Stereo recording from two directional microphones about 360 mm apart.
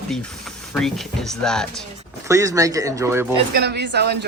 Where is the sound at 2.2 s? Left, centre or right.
Centre.